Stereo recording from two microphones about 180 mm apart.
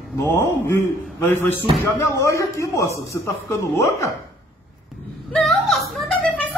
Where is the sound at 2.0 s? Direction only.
15° left (ahead or behind).